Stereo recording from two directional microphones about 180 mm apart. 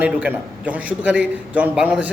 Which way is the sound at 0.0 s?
10° right (ahead or behind).